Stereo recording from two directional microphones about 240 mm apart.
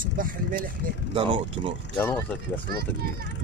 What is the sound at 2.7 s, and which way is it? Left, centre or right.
Speech, right.